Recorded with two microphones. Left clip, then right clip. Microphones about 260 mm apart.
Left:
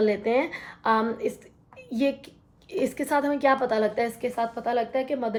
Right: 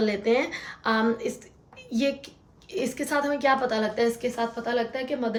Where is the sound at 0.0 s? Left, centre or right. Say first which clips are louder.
Left 1 dB; centre.